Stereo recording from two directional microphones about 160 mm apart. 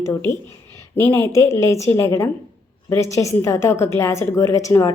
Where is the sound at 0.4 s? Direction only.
20° left (ahead or behind).